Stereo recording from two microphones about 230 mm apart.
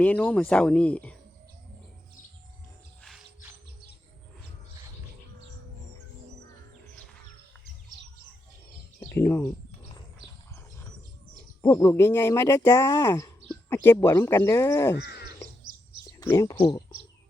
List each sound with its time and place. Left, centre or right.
0.0 s speech: centre
3.0 s music: centre
9.1 s speech: centre
11.6 s speech: centre
14.9 s crow: left
16.0 s speech: centre